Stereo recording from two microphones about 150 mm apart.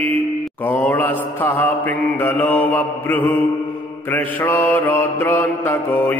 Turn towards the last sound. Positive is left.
turn(degrees=15)  # may be behind; listen again after turning